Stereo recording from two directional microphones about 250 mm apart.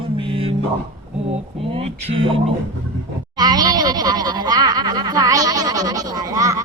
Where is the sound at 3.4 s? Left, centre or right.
Centre.